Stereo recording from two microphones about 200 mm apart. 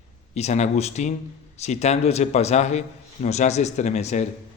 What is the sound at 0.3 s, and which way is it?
Speech, 35° left (ahead or behind).